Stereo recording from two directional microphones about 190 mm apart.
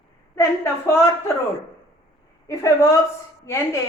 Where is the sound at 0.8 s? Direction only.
15° left (ahead or behind).